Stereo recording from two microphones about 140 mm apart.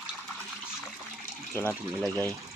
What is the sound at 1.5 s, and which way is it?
Speech, 15° left (ahead or behind).